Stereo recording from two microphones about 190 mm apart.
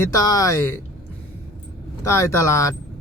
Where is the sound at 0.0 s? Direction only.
20° left (ahead or behind).